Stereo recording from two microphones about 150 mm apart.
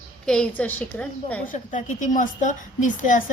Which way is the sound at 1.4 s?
60° left (ahead or behind).